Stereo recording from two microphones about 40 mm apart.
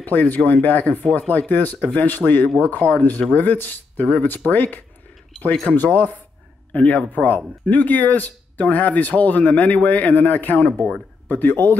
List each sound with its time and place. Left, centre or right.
0.0 s speech: left
2.8 s speech: right
3.2 s speech: left